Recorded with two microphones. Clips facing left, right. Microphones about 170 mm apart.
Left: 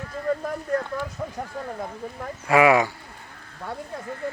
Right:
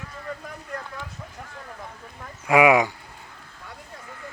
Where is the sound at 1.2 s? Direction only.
55° left (ahead or behind).